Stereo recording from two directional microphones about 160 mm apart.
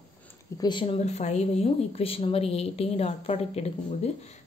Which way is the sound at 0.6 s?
30° left (ahead or behind).